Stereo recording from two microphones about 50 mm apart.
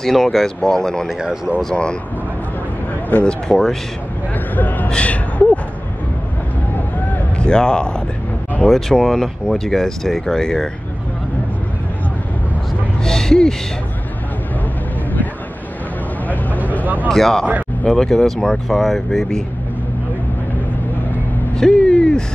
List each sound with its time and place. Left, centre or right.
0.0 s speech: centre
1.2 s speech: centre
3.3 s speech: centre
4.6 s a man's voice: left
4.8 s a sound: left
7.3 s speech: centre
8.6 s speech: centre
13.0 s a sound: centre
16.8 s speech: right
17.1 s speech: centre
21.5 s speech: centre